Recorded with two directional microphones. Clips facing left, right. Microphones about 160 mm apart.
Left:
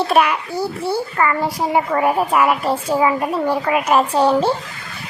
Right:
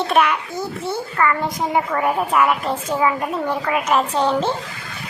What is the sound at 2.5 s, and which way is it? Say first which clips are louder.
Speech: left 3 dB; 35° left (ahead or behind).